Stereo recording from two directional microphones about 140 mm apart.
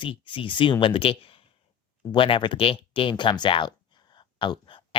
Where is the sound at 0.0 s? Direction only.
35° left (ahead or behind).